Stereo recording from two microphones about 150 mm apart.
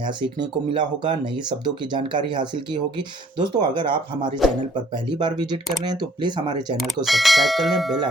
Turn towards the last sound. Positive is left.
turn(degrees=0)  # may be behind; listen again after turning